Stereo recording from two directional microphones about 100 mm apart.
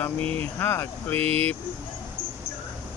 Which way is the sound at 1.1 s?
80° right.